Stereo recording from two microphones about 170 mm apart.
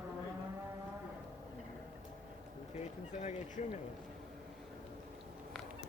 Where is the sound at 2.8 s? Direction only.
40° left (ahead or behind).